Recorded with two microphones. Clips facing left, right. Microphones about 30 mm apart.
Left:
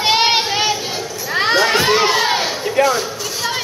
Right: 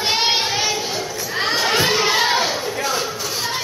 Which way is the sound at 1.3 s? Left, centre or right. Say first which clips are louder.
Left 6 dB; left.